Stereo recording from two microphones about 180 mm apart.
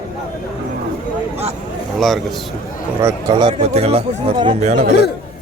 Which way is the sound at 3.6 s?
35° right (ahead or behind).